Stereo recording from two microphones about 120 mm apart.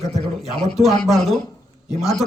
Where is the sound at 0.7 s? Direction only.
5° left (ahead or behind).